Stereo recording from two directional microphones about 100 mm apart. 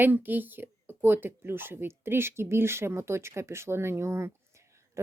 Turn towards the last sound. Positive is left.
turn(degrees=-25)  # may be behind; listen again after turning